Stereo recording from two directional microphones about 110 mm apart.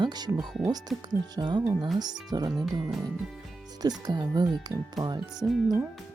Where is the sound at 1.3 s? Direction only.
40° right (ahead or behind).